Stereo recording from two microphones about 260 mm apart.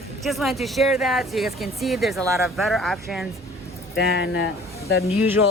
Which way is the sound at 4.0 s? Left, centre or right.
Left.